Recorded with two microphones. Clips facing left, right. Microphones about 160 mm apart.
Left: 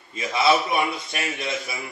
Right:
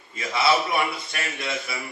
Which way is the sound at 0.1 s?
20° left (ahead or behind).